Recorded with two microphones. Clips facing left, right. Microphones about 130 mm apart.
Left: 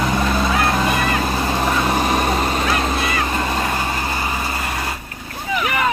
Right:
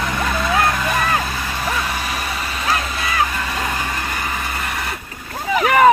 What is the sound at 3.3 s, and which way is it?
Vehicle, 30° left (ahead or behind).